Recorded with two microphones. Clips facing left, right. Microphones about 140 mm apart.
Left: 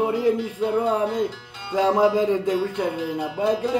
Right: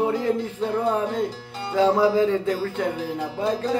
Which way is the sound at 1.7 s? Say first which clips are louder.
Even; 20° left (ahead or behind).